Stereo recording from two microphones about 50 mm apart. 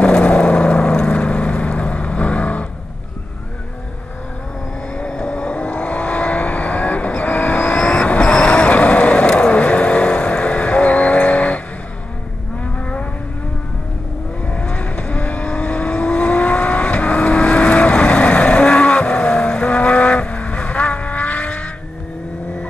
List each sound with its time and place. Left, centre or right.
0.0 s vehicle: left
4.9 s vehicle: centre
12.7 s vehicle: left
14.5 s vehicle: left